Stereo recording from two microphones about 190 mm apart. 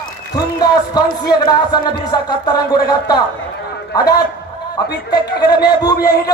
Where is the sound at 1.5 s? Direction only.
20° left (ahead or behind).